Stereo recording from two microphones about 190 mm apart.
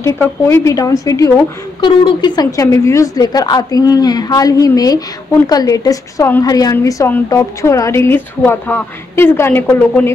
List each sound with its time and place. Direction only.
0.0 s a woman's voice: 15° left (ahead or behind)